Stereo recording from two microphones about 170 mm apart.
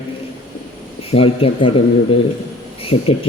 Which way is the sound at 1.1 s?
35° left (ahead or behind).